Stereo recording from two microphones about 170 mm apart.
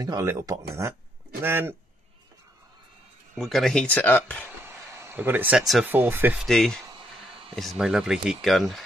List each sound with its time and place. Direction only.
0.0 s speech: 20° right (ahead or behind)
3.3 s speech: centre (ahead or behind)
4.6 s a sound: 15° right (ahead or behind)
5.9 s speech: 10° right (ahead or behind)
6.4 s speech: centre (ahead or behind)
6.9 s a sound: 30° right (ahead or behind)
7.5 s speech: centre (ahead or behind)